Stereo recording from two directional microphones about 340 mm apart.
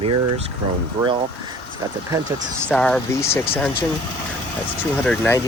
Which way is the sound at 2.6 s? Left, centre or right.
Centre.